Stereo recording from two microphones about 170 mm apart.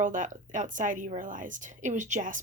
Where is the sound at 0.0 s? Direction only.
50° right (ahead or behind).